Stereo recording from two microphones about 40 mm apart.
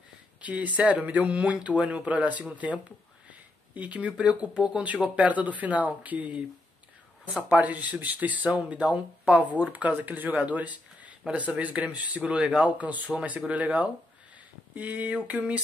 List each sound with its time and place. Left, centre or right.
0.4 s speech: right
3.3 s a sound: right
4.6 s speech: right
5.0 s speech: right
7.5 s speech: right
9.5 s speech: right